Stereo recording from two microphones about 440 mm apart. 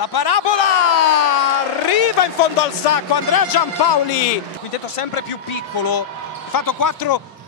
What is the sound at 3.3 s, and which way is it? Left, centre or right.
Speech, left.